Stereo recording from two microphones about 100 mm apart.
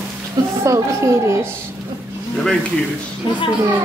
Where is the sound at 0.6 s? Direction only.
30° right (ahead or behind).